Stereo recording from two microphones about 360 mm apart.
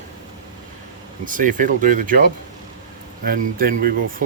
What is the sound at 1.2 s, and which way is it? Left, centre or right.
Speech, right.